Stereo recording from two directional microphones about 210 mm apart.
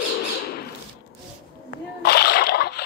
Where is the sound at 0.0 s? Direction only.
55° left (ahead or behind).